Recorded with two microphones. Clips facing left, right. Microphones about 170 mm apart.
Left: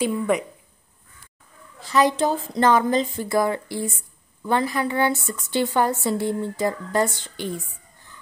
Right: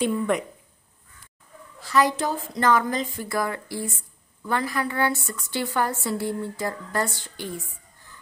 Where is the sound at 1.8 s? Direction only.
20° left (ahead or behind).